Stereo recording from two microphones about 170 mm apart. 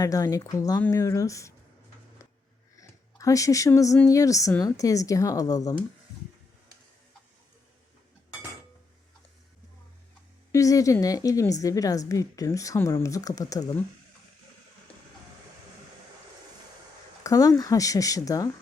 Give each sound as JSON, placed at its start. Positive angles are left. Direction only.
{"t": 0.0, "sound": "a woman's voice", "side_deg": 20}
{"t": 2.7, "sound": "a sound", "side_deg": 20}
{"t": 4.0, "sound": "a woman's voice", "side_deg": 20}
{"t": 10.5, "sound": "a woman's voice", "side_deg": 20}
{"t": 17.2, "sound": "a woman's voice", "side_deg": 20}